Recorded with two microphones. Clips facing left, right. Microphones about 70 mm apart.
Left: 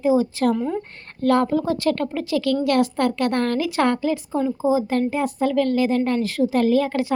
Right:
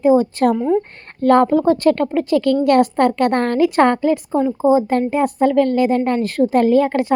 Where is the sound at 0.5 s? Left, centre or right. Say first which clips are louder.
Right 7 dB; centre.